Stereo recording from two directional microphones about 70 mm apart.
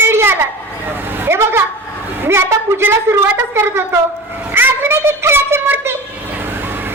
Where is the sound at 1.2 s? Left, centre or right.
Right.